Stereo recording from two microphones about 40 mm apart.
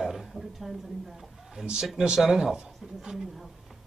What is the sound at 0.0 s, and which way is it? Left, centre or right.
A woman's voice, centre.